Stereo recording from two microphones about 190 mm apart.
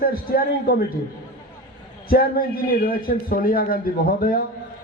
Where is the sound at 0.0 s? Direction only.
50° left (ahead or behind).